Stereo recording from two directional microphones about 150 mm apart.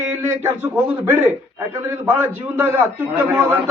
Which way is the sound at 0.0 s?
15° right (ahead or behind).